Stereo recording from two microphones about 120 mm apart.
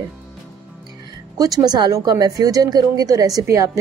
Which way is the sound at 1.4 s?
30° right (ahead or behind).